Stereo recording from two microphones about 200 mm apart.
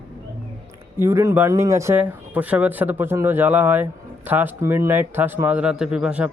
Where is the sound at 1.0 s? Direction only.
15° right (ahead or behind).